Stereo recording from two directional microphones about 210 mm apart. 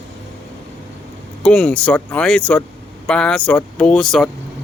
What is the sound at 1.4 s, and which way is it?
A man's voice, 5° left (ahead or behind).